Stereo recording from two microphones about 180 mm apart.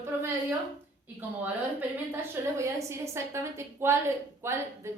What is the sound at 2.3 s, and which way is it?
A woman's voice, 15° right (ahead or behind).